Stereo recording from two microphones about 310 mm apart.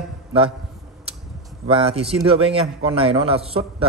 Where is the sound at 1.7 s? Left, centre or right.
Centre.